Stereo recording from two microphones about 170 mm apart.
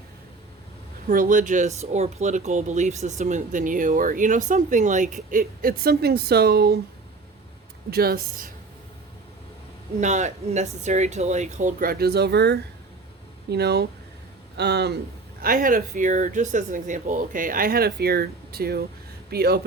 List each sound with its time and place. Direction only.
1.0 s speech: 55° right (ahead or behind)
7.9 s speech: 65° right (ahead or behind)
10.0 s speech: 45° right (ahead or behind); by 14.9 s 75° right (ahead or behind)
15.4 s speech: 55° right (ahead or behind)